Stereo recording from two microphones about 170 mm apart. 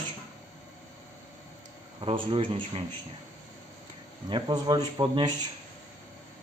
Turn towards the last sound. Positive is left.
turn(degrees=-25)  # may be behind; listen again after turning